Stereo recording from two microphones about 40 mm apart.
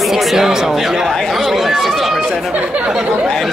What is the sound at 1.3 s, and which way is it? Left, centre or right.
Chatter, centre.